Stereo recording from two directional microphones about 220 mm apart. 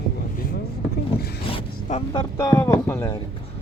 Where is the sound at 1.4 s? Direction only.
30° left (ahead or behind).